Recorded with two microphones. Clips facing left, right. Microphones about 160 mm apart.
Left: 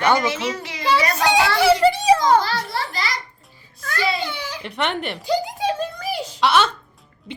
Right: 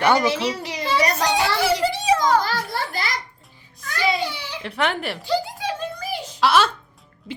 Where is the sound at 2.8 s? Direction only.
50° right (ahead or behind).